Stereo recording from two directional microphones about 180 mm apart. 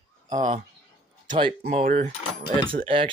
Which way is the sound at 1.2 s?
25° right (ahead or behind).